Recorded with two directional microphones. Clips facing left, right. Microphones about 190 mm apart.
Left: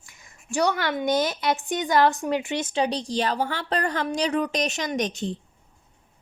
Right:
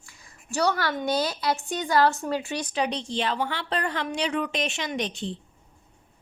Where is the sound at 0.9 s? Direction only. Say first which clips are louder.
Left 3 dB; 20° left (ahead or behind); by 5.4 s 45° left (ahead or behind).